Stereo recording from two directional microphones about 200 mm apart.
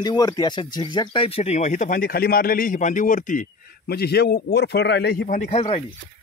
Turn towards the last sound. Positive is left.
turn(degrees=30)  # may be behind; listen again after turning